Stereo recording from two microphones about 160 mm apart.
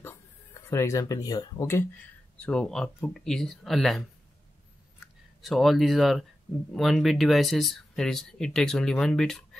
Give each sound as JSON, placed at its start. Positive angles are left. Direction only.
{"t": 0.6, "sound": "speech", "side_deg": 20}
{"t": 2.4, "sound": "speech", "side_deg": 5}
{"t": 5.0, "sound": "speech", "side_deg": 0}